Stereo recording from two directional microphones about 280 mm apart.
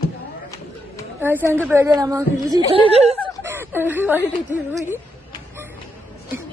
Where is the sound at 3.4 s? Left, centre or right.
Centre.